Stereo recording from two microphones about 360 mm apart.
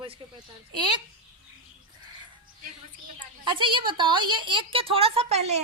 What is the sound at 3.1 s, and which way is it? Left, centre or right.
A woman's voice, centre.